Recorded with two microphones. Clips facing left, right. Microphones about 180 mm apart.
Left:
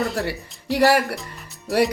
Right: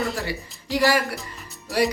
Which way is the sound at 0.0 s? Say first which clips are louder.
Left 3 dB; centre (ahead or behind).